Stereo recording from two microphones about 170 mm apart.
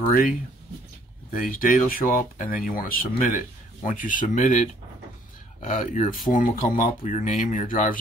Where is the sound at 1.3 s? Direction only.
50° left (ahead or behind).